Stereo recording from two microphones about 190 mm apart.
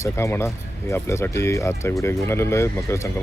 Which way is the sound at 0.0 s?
15° left (ahead or behind).